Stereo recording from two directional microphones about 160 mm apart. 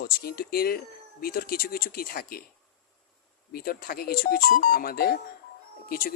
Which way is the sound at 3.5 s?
70° left (ahead or behind).